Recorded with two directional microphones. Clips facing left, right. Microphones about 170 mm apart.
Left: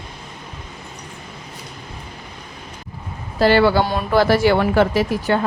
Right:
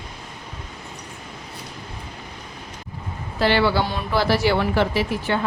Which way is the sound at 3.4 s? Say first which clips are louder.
Left 5 dB; 45° left (ahead or behind).